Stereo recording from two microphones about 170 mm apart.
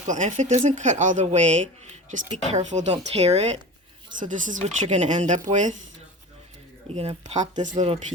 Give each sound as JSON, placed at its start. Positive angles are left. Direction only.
{"t": 0.1, "sound": "speech", "side_deg": -45}
{"t": 6.9, "sound": "speech", "side_deg": -40}